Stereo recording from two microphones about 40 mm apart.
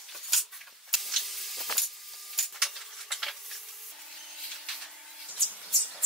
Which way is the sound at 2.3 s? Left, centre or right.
Centre.